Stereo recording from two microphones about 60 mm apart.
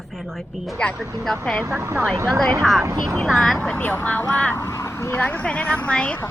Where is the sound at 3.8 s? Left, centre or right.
Left.